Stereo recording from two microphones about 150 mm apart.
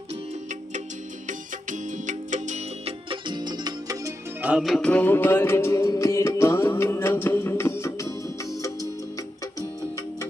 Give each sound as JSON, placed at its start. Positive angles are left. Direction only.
{"t": 1.3, "sound": "music", "side_deg": -55}
{"t": 4.4, "sound": "music", "side_deg": -5}